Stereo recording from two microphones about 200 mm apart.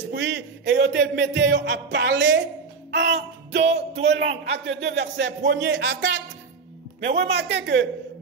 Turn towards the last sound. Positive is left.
turn(degrees=-60)  # may be behind; listen again after turning